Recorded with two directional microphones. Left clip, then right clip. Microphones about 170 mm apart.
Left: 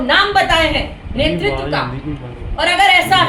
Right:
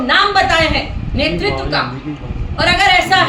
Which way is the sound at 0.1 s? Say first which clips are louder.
Right 1 dB; 5° right (ahead or behind).